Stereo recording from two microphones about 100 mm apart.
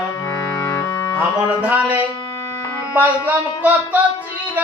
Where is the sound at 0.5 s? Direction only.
35° left (ahead or behind).